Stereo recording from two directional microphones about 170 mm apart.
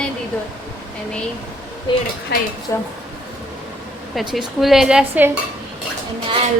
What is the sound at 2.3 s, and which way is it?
Speech, 70° left (ahead or behind).